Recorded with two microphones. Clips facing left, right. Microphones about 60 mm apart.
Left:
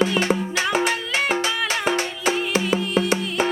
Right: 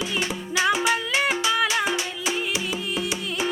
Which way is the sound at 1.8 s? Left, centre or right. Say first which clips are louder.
Left 4 dB; left.